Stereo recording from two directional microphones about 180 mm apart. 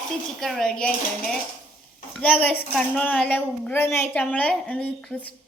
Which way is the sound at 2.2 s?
10° left (ahead or behind).